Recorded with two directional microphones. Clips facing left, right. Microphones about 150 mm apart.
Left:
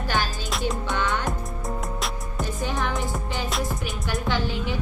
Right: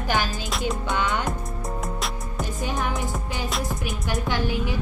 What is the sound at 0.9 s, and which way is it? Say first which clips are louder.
Music: right 2 dB; 15° right (ahead or behind).